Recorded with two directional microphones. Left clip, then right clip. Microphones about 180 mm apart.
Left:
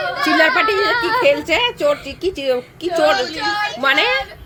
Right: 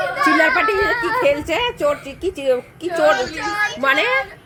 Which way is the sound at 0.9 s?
50° left (ahead or behind).